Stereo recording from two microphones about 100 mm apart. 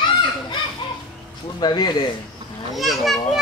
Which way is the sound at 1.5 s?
45° left (ahead or behind).